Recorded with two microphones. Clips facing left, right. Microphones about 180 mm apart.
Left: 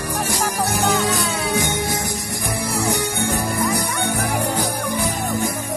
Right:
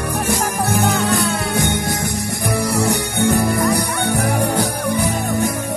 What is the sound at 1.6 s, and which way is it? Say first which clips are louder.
Music: right 2 dB; 60° right (ahead or behind).